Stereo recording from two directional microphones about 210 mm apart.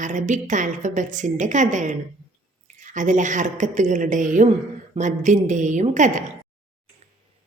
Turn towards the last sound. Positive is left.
turn(degrees=-35)  # may be behind; listen again after turning